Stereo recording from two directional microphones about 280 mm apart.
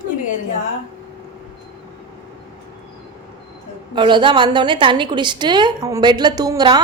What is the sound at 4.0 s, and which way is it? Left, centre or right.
A woman's voice, centre.